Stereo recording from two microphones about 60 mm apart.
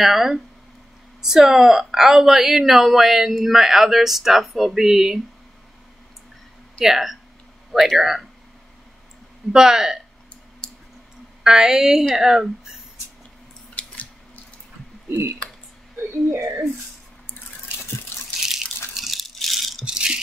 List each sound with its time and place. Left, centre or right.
0.0 s a woman's voice: centre
6.8 s a woman's voice: centre
9.5 s a woman's voice: centre
10.6 s a sound: centre
11.4 s a woman's voice: centre
13.7 s squish: left
15.0 s speech: right
18.1 s water: left
18.9 s water: centre
19.8 s rattle: centre